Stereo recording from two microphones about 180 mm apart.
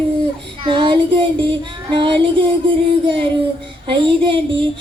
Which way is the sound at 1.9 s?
30° right (ahead or behind).